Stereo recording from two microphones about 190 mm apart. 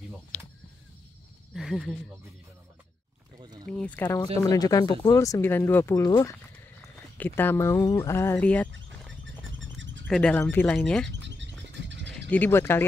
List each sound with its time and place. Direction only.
1.5 s speech: centre (ahead or behind)
3.7 s speech: 5° left (ahead or behind)
9.8 s a sound: 75° right (ahead or behind)
10.0 s speech: 5° left (ahead or behind)
11.1 s a sound: 70° right (ahead or behind)
12.1 s speech: 10° left (ahead or behind)